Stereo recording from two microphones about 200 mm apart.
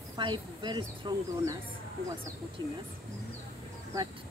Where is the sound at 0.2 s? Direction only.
25° right (ahead or behind).